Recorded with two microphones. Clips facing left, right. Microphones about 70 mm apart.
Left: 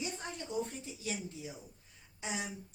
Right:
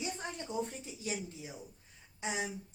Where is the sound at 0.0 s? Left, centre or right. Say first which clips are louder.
Right 1 dB; right.